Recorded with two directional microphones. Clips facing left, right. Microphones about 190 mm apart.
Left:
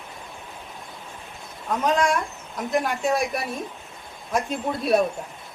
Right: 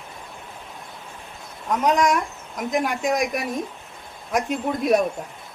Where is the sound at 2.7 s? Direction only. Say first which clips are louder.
Even; 15° right (ahead or behind).